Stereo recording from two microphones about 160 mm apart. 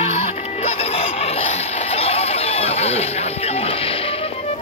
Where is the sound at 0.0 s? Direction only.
40° left (ahead or behind).